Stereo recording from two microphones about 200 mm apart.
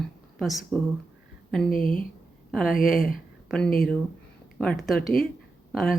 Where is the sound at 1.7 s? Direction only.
45° left (ahead or behind).